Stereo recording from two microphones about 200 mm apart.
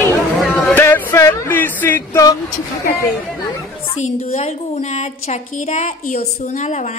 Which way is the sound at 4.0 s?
30° left (ahead or behind).